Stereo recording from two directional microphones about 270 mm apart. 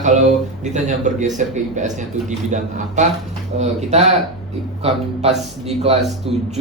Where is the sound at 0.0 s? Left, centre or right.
Right.